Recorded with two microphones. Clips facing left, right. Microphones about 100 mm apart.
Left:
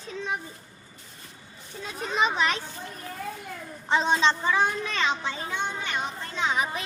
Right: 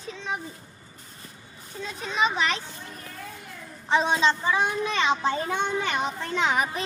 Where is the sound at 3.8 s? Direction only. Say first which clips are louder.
Right 1 dB; centre (ahead or behind).